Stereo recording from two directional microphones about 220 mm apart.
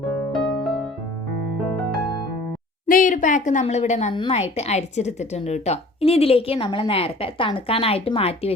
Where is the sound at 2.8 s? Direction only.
35° left (ahead or behind).